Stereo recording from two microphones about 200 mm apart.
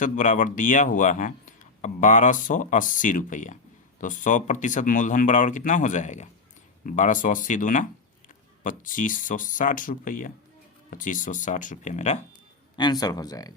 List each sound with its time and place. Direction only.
0.0 s a man's voice: 40° left (ahead or behind)
12.7 s speech: 20° left (ahead or behind)